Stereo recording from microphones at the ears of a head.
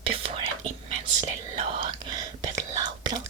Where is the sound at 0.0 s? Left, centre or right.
Right.